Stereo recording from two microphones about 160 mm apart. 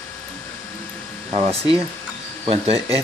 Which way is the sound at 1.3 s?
35° right (ahead or behind).